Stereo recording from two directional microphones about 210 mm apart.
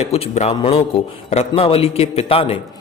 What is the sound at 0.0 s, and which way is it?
A man's voice, 30° left (ahead or behind).